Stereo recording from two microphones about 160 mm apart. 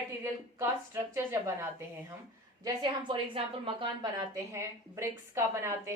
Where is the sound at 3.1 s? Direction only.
30° right (ahead or behind).